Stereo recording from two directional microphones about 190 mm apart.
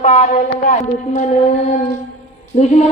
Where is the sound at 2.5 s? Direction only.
35° left (ahead or behind).